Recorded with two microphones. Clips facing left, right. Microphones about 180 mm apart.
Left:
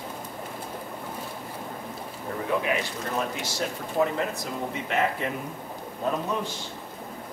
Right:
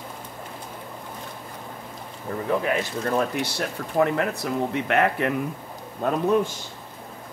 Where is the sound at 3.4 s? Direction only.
60° right (ahead or behind).